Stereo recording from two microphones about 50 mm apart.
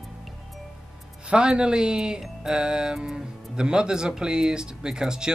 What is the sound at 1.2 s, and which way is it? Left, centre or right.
Speech, centre.